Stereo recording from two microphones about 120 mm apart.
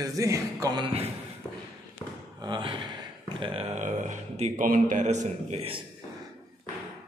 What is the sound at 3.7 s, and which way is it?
A man's voice, 80° right.